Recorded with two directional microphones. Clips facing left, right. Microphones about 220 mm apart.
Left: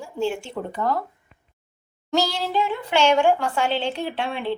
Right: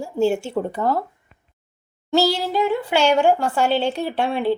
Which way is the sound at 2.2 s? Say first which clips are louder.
Right 5 dB; 40° right (ahead or behind).